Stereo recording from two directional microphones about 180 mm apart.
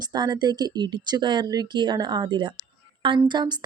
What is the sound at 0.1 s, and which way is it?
Speech, 25° right (ahead or behind).